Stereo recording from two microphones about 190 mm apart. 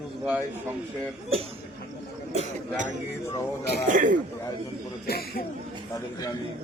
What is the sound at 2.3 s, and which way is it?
Speech, 40° right (ahead or behind).